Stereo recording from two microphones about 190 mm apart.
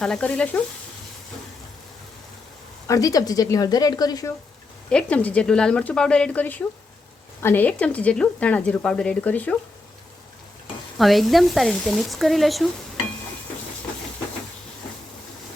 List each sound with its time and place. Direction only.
0.0 s frying: 5° left (ahead or behind)
2.8 s a woman's voice: 15° left (ahead or behind)
4.9 s speech: 5° left (ahead or behind)
10.9 s speech: centre (ahead or behind)